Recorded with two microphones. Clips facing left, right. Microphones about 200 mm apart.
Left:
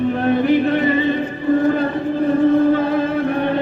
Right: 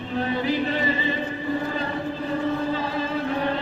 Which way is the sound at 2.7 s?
55° left (ahead or behind).